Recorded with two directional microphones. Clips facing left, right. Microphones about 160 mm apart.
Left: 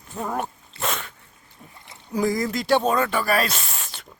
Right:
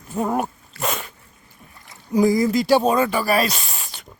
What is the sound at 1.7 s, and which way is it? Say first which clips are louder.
Rowboat: right 1 dB; 25° left (ahead or behind).